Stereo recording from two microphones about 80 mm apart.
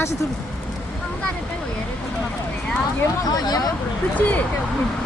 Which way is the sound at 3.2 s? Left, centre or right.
Left.